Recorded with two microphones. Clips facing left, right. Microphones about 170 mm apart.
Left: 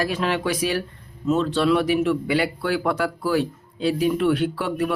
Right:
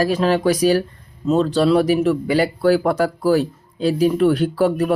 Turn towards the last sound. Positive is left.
turn(degrees=-40)  # may be behind; listen again after turning